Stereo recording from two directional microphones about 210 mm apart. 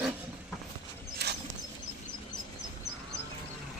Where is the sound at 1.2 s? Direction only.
50° right (ahead or behind).